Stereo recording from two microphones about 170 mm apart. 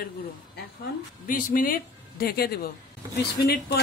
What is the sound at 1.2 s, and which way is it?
A woman's voice, 55° left (ahead or behind).